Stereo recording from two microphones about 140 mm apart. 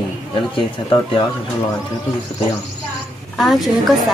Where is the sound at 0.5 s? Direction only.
35° left (ahead or behind).